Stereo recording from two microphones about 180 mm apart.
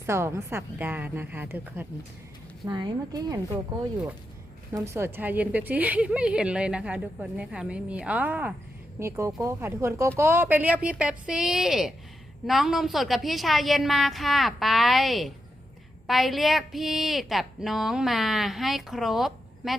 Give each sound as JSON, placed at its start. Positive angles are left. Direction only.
{"t": 0.0, "sound": "a woman's voice", "side_deg": -15}
{"t": 2.6, "sound": "speech", "side_deg": -25}
{"t": 4.7, "sound": "a woman's voice", "side_deg": -15}